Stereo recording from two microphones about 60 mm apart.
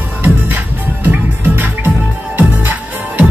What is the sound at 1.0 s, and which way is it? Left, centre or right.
Music, right.